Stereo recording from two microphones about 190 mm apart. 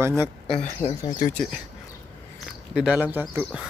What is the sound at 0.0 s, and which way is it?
Speech, 15° right (ahead or behind).